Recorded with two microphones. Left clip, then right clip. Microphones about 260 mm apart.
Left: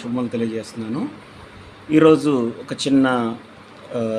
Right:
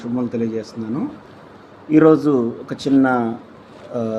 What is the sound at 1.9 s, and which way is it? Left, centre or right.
Speech, centre.